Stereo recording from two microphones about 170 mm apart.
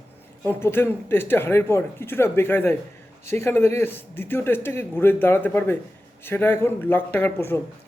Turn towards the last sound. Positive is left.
turn(degrees=15)  # may be behind; listen again after turning